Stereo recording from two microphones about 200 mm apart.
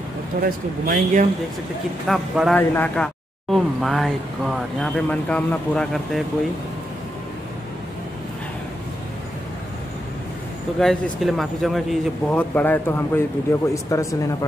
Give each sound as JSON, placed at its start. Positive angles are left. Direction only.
{"t": 0.4, "sound": "speech", "side_deg": -45}
{"t": 2.0, "sound": "speech", "side_deg": 0}
{"t": 10.8, "sound": "speech", "side_deg": 0}